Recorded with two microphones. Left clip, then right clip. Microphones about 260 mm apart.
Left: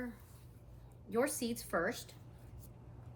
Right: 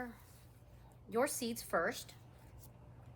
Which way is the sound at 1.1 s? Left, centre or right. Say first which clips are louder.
Left 1 dB; centre.